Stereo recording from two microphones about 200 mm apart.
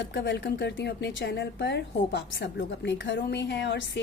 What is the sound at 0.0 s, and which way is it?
A woman's voice, 60° left (ahead or behind).